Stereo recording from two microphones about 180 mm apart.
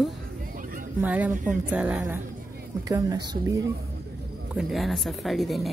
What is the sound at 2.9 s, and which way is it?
Speech, 20° right (ahead or behind).